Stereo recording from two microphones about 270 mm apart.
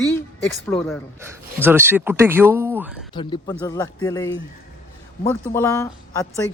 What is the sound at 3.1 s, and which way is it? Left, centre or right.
Speech, centre.